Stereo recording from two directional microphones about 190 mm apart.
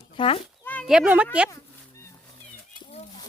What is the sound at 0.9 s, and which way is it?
Speech, 5° right (ahead or behind).